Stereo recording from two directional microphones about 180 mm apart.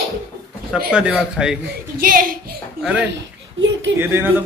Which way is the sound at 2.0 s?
50° right (ahead or behind).